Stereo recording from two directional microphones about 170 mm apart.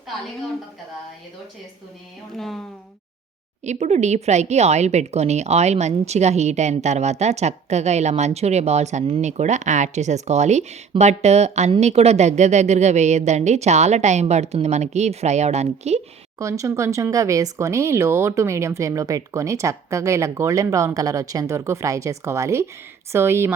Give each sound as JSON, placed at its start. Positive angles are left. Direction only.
{"t": 2.3, "sound": "speech", "side_deg": 0}
{"t": 3.6, "sound": "speech", "side_deg": -40}
{"t": 16.4, "sound": "speech", "side_deg": -20}